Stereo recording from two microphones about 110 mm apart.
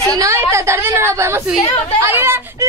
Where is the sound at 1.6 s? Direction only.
60° left (ahead or behind).